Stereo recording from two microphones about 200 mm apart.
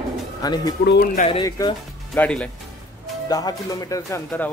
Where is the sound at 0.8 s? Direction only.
60° left (ahead or behind).